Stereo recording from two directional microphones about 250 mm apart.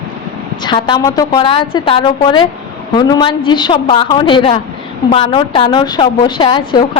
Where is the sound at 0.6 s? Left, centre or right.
Centre.